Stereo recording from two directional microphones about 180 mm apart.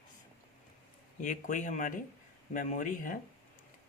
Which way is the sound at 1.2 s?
45° left (ahead or behind).